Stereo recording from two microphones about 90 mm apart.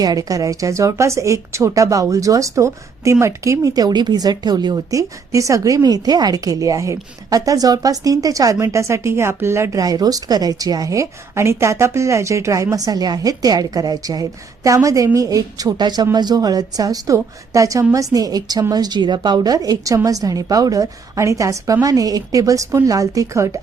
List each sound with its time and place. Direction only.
0.0 s a woman's voice: 45° right (ahead or behind)